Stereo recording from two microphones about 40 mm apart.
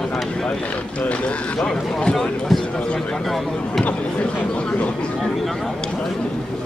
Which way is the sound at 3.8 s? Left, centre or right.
Left.